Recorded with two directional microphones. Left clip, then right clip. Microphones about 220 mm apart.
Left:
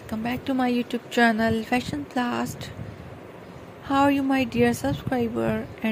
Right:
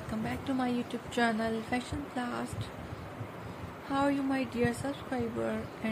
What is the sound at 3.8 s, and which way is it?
Speech, 35° left (ahead or behind).